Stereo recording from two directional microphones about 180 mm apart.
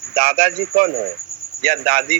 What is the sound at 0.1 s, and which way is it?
Speech, 50° right (ahead or behind).